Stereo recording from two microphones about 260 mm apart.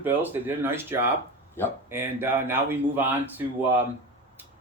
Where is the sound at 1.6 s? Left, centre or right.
Centre.